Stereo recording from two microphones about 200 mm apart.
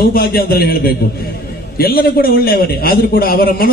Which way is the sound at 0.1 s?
50° left (ahead or behind).